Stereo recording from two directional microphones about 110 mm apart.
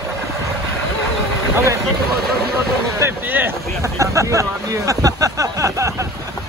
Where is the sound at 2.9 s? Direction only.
20° right (ahead or behind).